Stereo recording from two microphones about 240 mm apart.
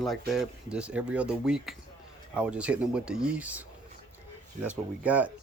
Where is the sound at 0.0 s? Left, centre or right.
Centre.